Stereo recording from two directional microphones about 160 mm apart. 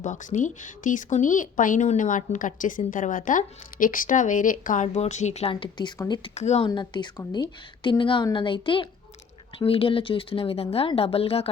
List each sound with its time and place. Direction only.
0.0 s speech: 50° left (ahead or behind); by 6.3 s 25° left (ahead or behind)
6.3 s speech: 45° left (ahead or behind)
6.7 s a woman's voice: 30° left (ahead or behind)